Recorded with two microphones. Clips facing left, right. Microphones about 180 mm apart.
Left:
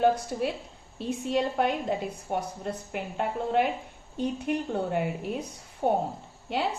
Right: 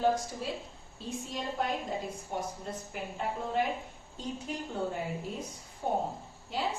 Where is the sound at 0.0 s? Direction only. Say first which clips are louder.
Left 5 dB; 65° left (ahead or behind).